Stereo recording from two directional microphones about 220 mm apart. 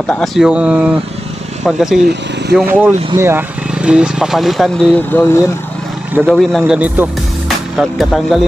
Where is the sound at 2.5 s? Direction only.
10° right (ahead or behind); by 5.3 s 10° left (ahead or behind).